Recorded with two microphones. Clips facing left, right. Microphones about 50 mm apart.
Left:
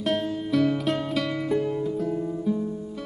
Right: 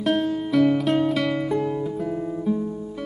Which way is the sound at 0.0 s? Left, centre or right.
Centre.